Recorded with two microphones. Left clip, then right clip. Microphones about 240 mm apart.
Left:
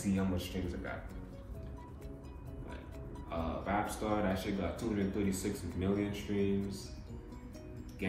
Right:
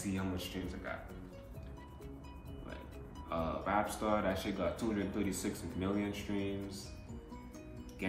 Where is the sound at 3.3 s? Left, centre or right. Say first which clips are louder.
Right 1 dB; centre.